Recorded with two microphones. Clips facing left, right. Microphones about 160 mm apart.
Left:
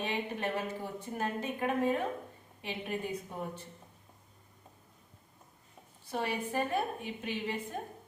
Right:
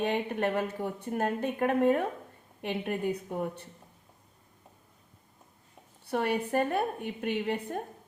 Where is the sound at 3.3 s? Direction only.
55° right (ahead or behind).